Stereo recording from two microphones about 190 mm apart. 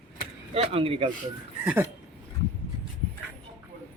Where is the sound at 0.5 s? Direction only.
30° right (ahead or behind).